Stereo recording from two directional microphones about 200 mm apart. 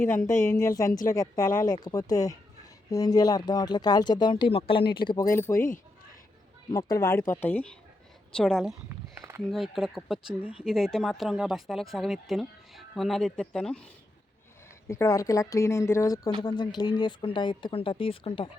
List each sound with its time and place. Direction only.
0.3 s speech: 15° left (ahead or behind)
5.5 s speech: 40° left (ahead or behind)
6.7 s speech: 15° left (ahead or behind); by 8.7 s centre (ahead or behind)
8.9 s walk: 15° right (ahead or behind)
9.5 s speech: centre (ahead or behind)
14.8 s speech: 15° left (ahead or behind)